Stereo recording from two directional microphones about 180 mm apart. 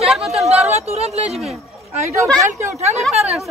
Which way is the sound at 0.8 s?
35° right (ahead or behind).